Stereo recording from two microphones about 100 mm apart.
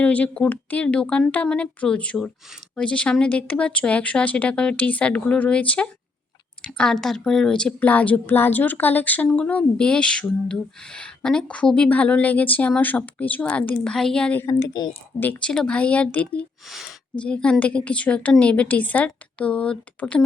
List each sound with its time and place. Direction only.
0.0 s a woman's voice: 15° left (ahead or behind)
14.7 s a woman's voice: 45° left (ahead or behind)
15.2 s a woman's voice: 15° left (ahead or behind)
16.6 s speech: centre (ahead or behind)
17.2 s a woman's voice: 10° left (ahead or behind)